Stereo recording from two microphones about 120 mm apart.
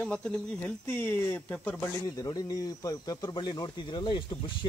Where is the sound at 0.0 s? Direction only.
10° left (ahead or behind).